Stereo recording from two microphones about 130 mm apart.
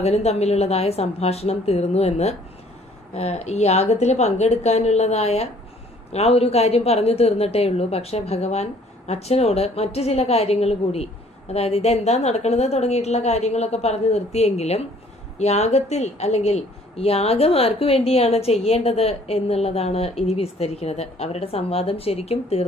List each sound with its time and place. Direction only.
0.0 s a woman's voice: 55° left (ahead or behind)